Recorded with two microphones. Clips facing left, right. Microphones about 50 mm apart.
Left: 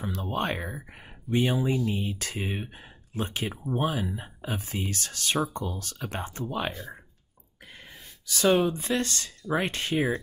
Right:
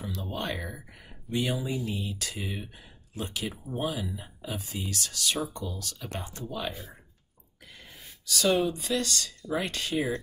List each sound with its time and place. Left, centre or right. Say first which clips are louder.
0.0 s speech: left 4 dB; left
6.7 s speech: left 3 dB; centre
8.3 s speech: left 3 dB; left